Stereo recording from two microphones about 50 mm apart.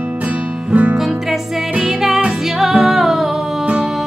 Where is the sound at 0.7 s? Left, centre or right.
Right.